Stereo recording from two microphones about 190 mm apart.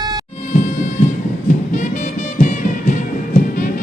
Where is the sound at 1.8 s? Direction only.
40° left (ahead or behind).